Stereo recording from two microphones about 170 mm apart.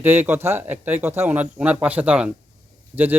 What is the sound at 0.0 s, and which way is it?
Speech, 10° right (ahead or behind).